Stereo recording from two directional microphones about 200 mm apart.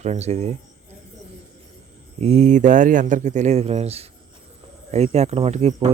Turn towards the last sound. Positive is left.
turn(degrees=-35)  # may be behind; listen again after turning